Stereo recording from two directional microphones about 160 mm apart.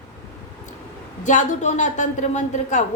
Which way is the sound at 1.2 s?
50° left (ahead or behind).